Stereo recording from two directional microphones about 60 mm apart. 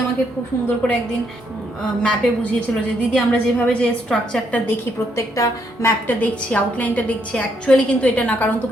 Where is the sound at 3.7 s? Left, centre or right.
Centre.